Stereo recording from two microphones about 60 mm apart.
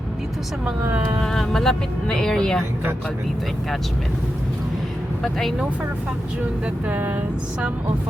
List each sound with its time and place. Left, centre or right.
1.2 s speech: centre
5.2 s speech: centre
6.8 s speech: right